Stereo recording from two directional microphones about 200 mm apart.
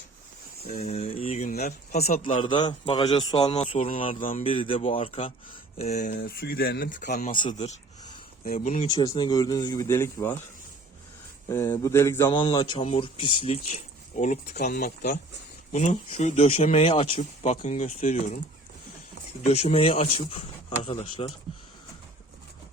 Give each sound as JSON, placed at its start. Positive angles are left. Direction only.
{"t": 0.7, "sound": "speech", "side_deg": 30}
{"t": 1.2, "sound": "speech", "side_deg": 40}
{"t": 2.4, "sound": "speech", "side_deg": 25}
{"t": 3.7, "sound": "speech", "side_deg": 40}
{"t": 4.4, "sound": "speech", "side_deg": 25}
{"t": 6.1, "sound": "speech", "side_deg": 50}
{"t": 7.3, "sound": "speech", "side_deg": 30}
{"t": 8.4, "sound": "speech", "side_deg": 40}
{"t": 8.9, "sound": "speech", "side_deg": 20}
{"t": 11.4, "sound": "speech", "side_deg": 15}
{"t": 19.5, "sound": "speech", "side_deg": 35}